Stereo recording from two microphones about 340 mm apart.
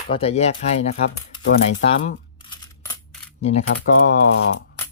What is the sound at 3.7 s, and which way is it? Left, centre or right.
Speech, left.